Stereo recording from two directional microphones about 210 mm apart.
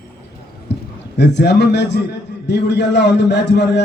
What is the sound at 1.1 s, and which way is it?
A man's voice, 55° left (ahead or behind).